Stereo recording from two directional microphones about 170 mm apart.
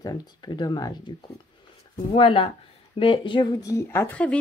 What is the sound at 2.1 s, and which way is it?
Speech, 30° left (ahead or behind).